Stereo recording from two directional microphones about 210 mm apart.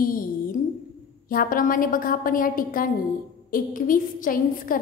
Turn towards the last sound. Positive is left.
turn(degrees=40)  # may be behind; listen again after turning